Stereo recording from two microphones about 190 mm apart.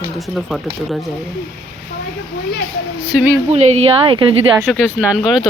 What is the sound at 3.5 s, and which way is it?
Speech, 35° right (ahead or behind).